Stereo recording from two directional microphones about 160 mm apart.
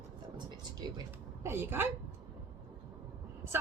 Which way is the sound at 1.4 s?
15° right (ahead or behind).